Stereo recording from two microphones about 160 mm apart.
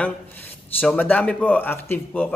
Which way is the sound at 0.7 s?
10° left (ahead or behind).